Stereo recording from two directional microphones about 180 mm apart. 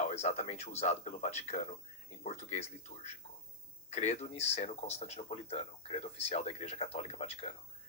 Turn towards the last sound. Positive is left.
turn(degrees=35)  # may be behind; listen again after turning